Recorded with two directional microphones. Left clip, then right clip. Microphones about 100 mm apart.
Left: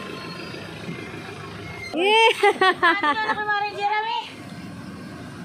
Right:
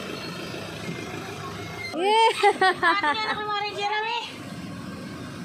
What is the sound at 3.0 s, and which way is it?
Speech, 90° left.